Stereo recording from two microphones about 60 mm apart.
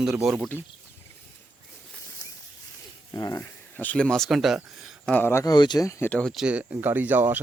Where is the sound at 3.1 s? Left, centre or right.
Left.